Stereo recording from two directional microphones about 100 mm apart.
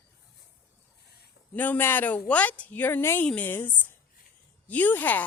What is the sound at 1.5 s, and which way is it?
A woman's voice, 20° left (ahead or behind).